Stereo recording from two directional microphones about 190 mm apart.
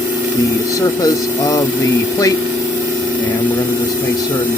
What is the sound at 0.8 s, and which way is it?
Speech, 15° left (ahead or behind).